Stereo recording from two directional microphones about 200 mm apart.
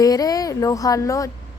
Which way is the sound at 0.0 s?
20° left (ahead or behind).